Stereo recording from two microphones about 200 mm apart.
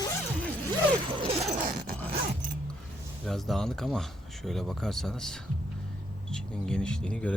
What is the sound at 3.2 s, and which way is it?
Speech, centre (ahead or behind).